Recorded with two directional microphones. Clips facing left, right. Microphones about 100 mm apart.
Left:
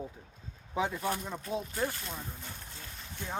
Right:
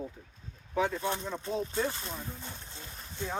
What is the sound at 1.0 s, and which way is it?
Speech, 25° right (ahead or behind).